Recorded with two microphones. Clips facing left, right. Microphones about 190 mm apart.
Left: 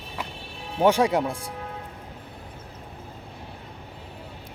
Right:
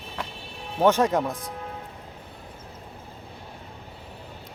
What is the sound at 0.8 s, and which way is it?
Speech, 10° left (ahead or behind).